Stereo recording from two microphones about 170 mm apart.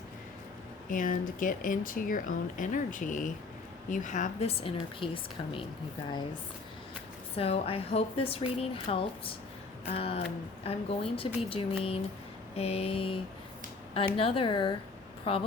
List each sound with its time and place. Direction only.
0.9 s speech: 50° left (ahead or behind); by 5.6 s 30° left (ahead or behind)
7.3 s speech: 35° left (ahead or behind)